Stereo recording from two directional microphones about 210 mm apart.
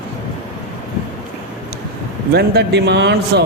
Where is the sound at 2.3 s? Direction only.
50° right (ahead or behind).